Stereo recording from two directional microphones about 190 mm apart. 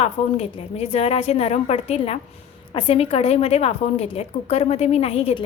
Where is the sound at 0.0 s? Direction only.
35° left (ahead or behind).